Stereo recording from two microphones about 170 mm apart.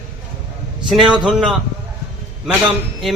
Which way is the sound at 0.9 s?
5° right (ahead or behind).